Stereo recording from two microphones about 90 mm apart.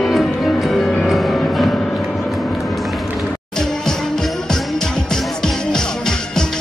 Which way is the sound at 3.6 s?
5° left (ahead or behind).